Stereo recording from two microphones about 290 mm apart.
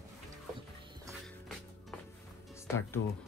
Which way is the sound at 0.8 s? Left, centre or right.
Centre.